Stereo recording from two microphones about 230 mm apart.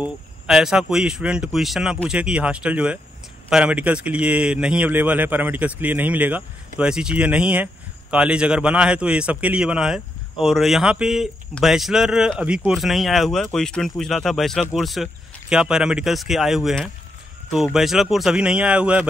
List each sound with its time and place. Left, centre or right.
0.0 s speech: centre